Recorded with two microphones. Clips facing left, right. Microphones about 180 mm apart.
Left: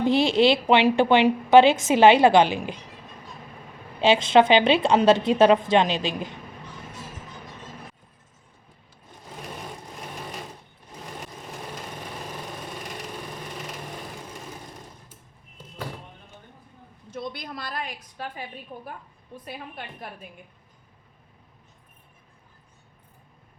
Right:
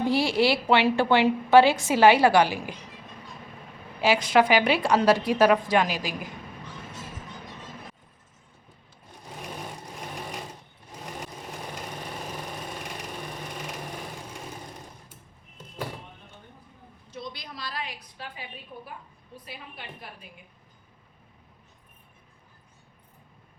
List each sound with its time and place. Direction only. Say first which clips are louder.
0.0 s a woman's voice: left 4 dB; 20° left (ahead or behind)
4.0 s a woman's voice: left 4 dB; 25° left (ahead or behind)
17.1 s a sound: left 5 dB; 55° left (ahead or behind)
19.5 s a woman's voice: left 5 dB; 50° left (ahead or behind)